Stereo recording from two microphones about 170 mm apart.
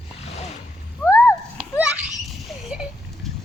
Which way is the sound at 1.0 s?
15° left (ahead or behind).